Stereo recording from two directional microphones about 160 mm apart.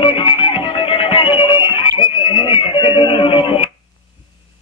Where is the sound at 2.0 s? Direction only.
30° left (ahead or behind).